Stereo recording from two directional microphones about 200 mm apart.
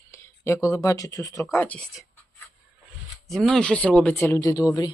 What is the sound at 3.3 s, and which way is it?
Speech, centre (ahead or behind).